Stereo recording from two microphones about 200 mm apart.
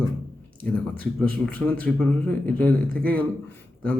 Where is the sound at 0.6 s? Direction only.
5° left (ahead or behind).